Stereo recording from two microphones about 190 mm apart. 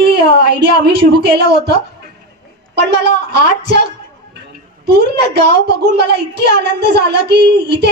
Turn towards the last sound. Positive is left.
turn(degrees=-60)  # may be behind; listen again after turning